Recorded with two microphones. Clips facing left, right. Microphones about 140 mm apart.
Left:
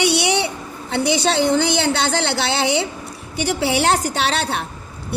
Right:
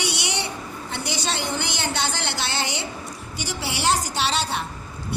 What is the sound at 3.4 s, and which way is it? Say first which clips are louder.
A woman's voice: left 9 dB; 60° left (ahead or behind).